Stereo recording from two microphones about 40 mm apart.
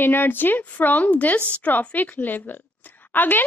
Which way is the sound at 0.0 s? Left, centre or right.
Left.